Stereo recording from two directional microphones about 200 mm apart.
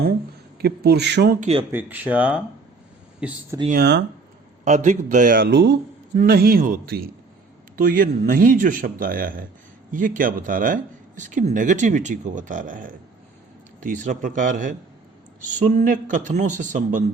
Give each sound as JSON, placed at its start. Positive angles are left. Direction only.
{"t": 0.6, "sound": "speech", "side_deg": -50}
{"t": 1.4, "sound": "speech", "side_deg": -30}
{"t": 1.7, "sound": "speech", "side_deg": -10}
{"t": 3.7, "sound": "speech", "side_deg": -55}
{"t": 4.6, "sound": "speech", "side_deg": -35}
{"t": 6.1, "sound": "speech", "side_deg": -50}